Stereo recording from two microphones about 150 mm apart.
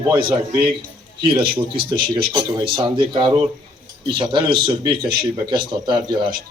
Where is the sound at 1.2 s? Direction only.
35° right (ahead or behind).